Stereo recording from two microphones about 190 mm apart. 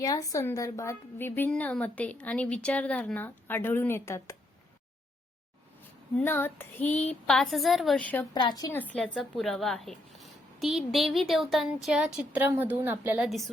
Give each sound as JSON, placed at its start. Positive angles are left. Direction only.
{"t": 0.0, "sound": "a woman's voice", "side_deg": 20}
{"t": 6.1, "sound": "a woman's voice", "side_deg": 10}
{"t": 8.3, "sound": "a woman's voice", "side_deg": 25}
{"t": 8.8, "sound": "speech", "side_deg": 5}